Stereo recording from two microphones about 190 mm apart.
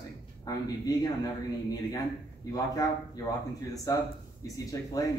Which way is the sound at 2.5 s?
20° left (ahead or behind).